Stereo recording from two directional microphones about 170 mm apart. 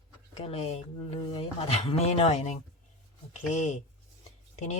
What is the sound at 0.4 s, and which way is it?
Speech, 35° left (ahead or behind).